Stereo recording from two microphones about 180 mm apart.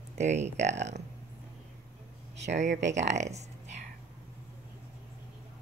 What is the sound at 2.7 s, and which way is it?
Speech, 80° right.